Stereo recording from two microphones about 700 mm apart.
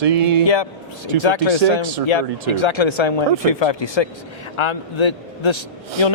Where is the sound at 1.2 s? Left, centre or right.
Left.